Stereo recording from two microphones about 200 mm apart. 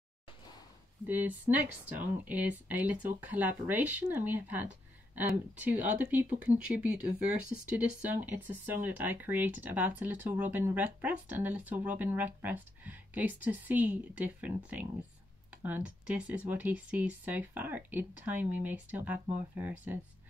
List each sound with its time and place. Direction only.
1.0 s speech: 10° right (ahead or behind)
5.9 s speech: 10° right (ahead or behind)